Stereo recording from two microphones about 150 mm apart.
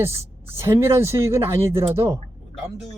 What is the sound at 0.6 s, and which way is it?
Speech, 15° right (ahead or behind).